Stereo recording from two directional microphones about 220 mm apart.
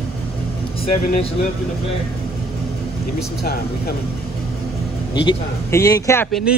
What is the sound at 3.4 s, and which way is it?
Speech, 45° left (ahead or behind).